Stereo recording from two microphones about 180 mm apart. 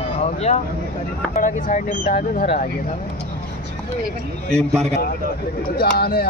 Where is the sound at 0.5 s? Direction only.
40° left (ahead or behind).